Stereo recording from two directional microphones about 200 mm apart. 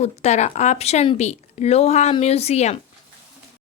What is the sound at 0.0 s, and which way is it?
Speech, 35° left (ahead or behind).